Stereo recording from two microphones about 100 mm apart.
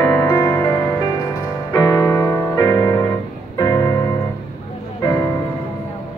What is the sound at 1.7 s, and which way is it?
Music, 40° left (ahead or behind).